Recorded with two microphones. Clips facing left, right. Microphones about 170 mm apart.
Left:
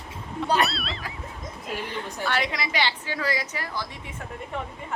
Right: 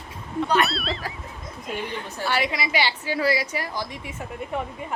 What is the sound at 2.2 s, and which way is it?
A woman's voice, 5° right (ahead or behind).